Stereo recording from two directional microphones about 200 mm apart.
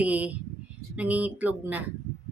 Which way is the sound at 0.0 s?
5° right (ahead or behind).